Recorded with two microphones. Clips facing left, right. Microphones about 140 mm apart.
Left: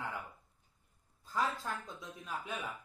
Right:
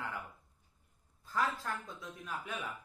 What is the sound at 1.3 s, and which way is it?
Speech, 20° left (ahead or behind).